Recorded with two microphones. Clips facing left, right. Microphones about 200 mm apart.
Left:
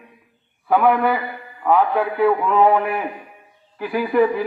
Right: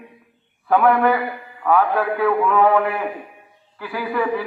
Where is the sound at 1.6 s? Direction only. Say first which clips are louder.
Even; 15° left (ahead or behind).